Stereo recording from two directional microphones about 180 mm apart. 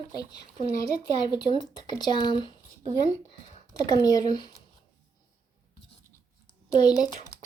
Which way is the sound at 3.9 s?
20° left (ahead or behind).